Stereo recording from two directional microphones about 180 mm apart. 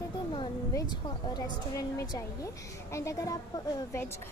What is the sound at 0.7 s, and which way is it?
A woman's voice, 20° left (ahead or behind).